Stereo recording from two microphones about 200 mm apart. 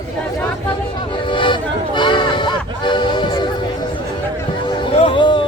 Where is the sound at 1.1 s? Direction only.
25° left (ahead or behind).